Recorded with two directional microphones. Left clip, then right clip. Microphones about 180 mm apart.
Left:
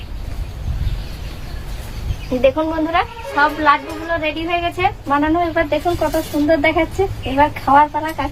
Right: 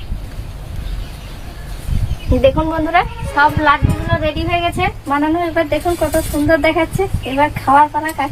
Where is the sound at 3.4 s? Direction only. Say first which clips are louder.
Right 2 dB; 15° right (ahead or behind).